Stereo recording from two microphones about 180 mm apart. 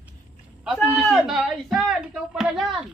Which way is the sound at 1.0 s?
Centre (ahead or behind).